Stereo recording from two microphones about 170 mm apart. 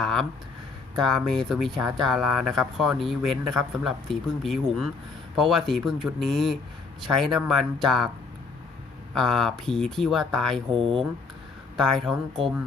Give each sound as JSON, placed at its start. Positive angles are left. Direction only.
{"t": 0.0, "sound": "speech", "side_deg": 0}
{"t": 9.1, "sound": "speech", "side_deg": 0}
{"t": 10.8, "sound": "speech", "side_deg": -30}
{"t": 11.8, "sound": "speech", "side_deg": 0}